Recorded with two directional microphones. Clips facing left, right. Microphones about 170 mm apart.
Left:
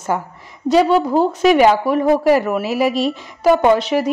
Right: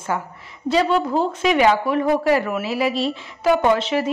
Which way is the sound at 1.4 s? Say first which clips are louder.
Left 5 dB; 45° left (ahead or behind).